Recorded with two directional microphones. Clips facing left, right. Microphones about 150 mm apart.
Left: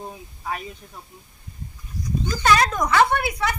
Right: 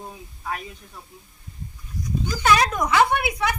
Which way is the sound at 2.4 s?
10° right (ahead or behind).